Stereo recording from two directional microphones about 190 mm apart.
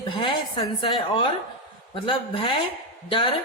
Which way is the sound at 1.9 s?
25° left (ahead or behind).